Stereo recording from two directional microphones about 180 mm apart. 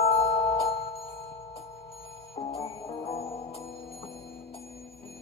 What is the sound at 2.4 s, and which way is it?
Music, 40° left (ahead or behind).